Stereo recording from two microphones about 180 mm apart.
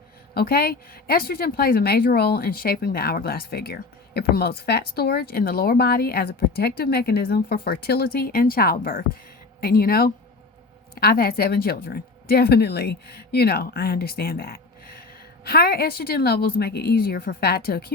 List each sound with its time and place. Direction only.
0.3 s speech: 60° left (ahead or behind)